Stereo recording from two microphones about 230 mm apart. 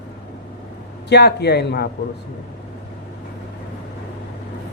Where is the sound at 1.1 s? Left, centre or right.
Left.